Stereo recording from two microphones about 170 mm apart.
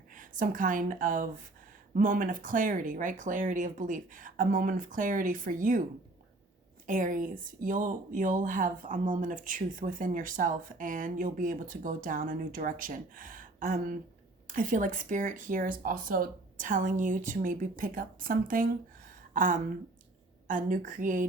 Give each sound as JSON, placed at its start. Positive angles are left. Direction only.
{"t": 0.1, "sound": "speech", "side_deg": -50}
{"t": 6.8, "sound": "speech", "side_deg": -50}